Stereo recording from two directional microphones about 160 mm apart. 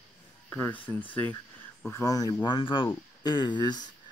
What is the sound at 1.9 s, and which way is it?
Speech, 20° left (ahead or behind).